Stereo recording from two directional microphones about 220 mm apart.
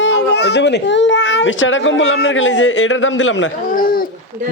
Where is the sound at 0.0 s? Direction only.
50° left (ahead or behind).